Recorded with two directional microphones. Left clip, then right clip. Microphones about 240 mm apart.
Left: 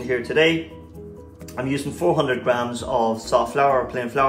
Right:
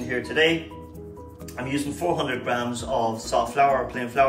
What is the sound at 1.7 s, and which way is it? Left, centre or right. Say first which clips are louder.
Speech: left 4 dB; left.